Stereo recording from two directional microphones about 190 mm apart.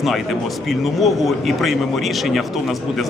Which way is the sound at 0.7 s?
Centre (ahead or behind).